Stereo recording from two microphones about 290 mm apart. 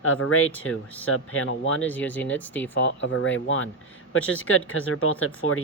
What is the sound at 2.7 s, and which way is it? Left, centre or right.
A man's voice, left.